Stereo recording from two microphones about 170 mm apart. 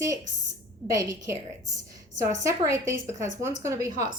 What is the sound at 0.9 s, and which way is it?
A woman's voice, 20° right (ahead or behind).